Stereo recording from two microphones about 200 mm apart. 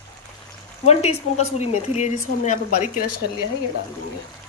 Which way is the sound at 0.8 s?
30° left (ahead or behind).